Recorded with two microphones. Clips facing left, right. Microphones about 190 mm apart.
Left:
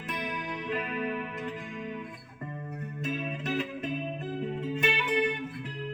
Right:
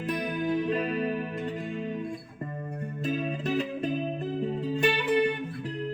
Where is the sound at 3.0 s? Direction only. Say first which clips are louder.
Right 4 dB; 30° right (ahead or behind).